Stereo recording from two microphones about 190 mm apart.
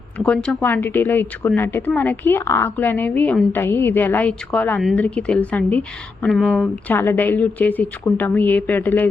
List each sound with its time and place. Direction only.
0.2 s speech: 5° left (ahead or behind)